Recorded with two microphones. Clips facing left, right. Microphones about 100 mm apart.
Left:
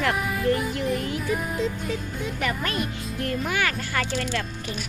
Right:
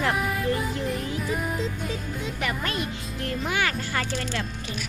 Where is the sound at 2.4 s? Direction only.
25° right (ahead or behind).